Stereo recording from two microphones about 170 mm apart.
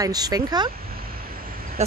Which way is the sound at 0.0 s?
20° right (ahead or behind).